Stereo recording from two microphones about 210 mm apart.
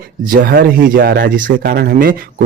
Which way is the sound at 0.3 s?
45° right (ahead or behind).